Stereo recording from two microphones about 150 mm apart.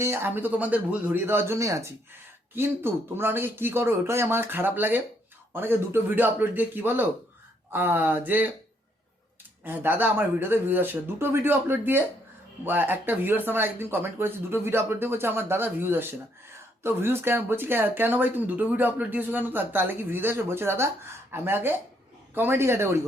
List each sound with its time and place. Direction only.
0.0 s speech: 15° right (ahead or behind)
9.6 s speech: 15° right (ahead or behind)